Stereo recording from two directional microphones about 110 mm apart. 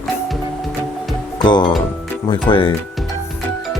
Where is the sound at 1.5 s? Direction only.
45° left (ahead or behind).